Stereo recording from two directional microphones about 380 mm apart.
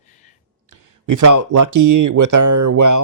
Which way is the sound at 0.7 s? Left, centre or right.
Right.